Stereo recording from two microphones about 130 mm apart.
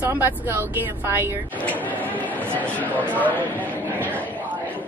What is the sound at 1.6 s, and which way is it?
Speech, 10° left (ahead or behind).